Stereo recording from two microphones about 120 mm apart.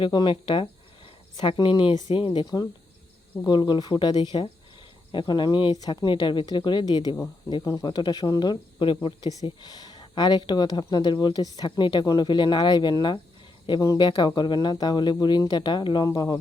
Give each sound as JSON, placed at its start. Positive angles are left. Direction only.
{"t": 0.0, "sound": "speech", "side_deg": 40}
{"t": 13.7, "sound": "speech", "side_deg": 25}
{"t": 14.0, "sound": "speech", "side_deg": 40}